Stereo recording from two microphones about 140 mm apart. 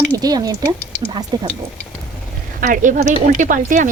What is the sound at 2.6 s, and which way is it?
A woman's voice, 65° right (ahead or behind).